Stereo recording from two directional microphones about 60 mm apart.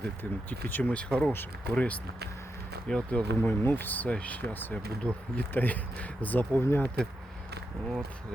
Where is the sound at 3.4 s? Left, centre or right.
Left.